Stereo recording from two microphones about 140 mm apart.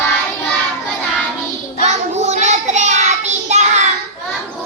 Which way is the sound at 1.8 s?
55° right (ahead or behind).